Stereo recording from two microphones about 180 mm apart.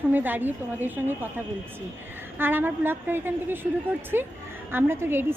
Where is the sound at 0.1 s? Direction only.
10° right (ahead or behind).